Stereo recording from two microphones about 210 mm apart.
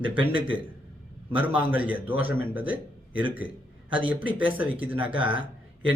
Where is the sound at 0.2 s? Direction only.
25° right (ahead or behind).